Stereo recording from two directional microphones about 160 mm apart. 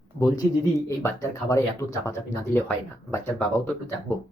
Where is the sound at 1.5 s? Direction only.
20° left (ahead or behind).